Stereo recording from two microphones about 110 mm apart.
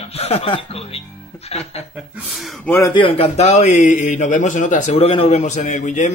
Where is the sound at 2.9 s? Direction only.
55° left (ahead or behind); by 4.1 s 90° left.